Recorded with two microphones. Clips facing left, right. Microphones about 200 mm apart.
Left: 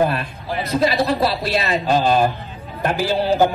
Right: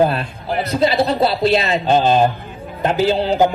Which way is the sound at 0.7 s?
25° right (ahead or behind).